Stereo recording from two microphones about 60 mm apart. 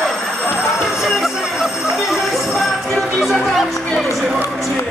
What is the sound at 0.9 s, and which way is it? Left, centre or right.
Music, centre.